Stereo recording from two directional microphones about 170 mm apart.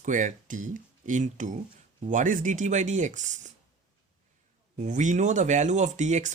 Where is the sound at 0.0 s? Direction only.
50° right (ahead or behind).